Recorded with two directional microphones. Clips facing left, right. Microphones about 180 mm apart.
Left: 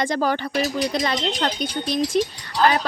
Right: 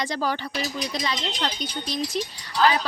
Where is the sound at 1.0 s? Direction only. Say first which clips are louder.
Left 5 dB; 55° left (ahead or behind).